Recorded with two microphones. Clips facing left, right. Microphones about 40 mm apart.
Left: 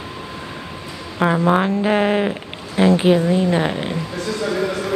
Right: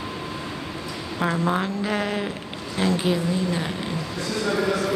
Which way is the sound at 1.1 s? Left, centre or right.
Left.